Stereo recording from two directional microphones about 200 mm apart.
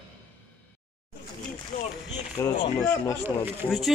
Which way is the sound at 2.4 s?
15° left (ahead or behind).